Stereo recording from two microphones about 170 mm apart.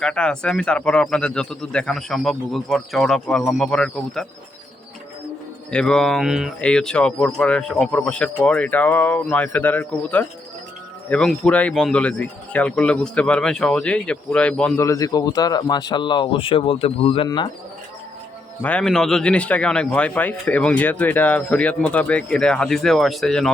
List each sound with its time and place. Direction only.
0.0 s a man's voice: 5° left (ahead or behind)
5.7 s speech: 5° left (ahead or behind)
14.8 s speech: 20° left (ahead or behind)
18.6 s speech: 5° left (ahead or behind)